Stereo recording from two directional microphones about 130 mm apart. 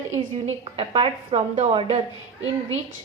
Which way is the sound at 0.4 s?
50° right (ahead or behind).